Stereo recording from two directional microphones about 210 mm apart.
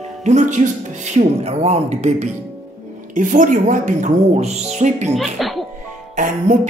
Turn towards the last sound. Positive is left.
turn(degrees=-35)  # may be behind; listen again after turning